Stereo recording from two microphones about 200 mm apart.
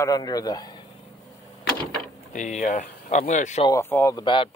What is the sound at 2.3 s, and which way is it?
Speech, 35° left (ahead or behind).